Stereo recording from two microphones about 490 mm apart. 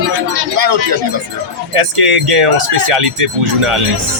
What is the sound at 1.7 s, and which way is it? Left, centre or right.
Speech, right.